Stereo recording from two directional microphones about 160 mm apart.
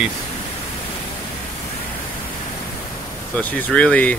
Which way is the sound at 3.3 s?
10° left (ahead or behind).